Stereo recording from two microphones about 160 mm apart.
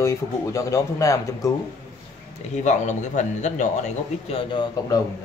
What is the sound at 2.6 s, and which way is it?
A man's voice, 50° left (ahead or behind).